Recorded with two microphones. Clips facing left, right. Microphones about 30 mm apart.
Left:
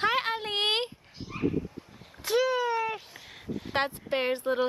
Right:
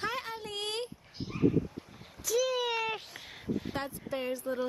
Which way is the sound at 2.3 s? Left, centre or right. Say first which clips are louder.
Left 4 dB; left.